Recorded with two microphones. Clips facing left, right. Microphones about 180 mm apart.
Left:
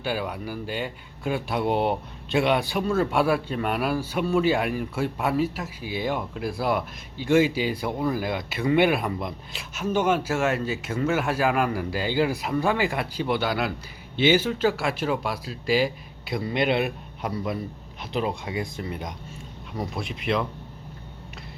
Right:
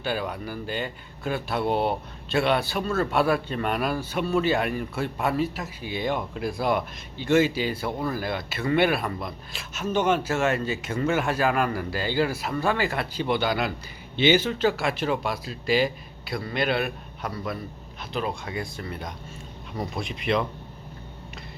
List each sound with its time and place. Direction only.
0.0 s speech: 10° left (ahead or behind)
16.2 s a man's voice: 20° left (ahead or behind)
19.7 s speech: 5° left (ahead or behind)